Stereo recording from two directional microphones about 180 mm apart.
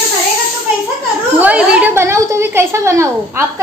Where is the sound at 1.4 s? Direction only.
5° right (ahead or behind).